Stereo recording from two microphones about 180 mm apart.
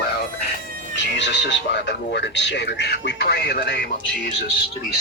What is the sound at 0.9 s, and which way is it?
Speech, 80° left.